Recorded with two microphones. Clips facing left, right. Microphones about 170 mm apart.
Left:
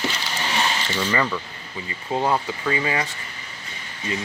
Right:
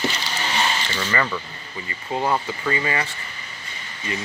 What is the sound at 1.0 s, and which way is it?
Speech, 10° left (ahead or behind).